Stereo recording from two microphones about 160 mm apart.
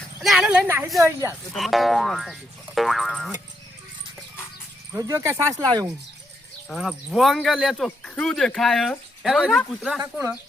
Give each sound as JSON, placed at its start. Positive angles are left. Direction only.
{"t": 0.2, "sound": "speech", "side_deg": -5}
{"t": 1.5, "sound": "speech", "side_deg": 0}
{"t": 4.9, "sound": "speech", "side_deg": -20}
{"t": 6.7, "sound": "speech", "side_deg": 0}
{"t": 10.0, "sound": "speech", "side_deg": -20}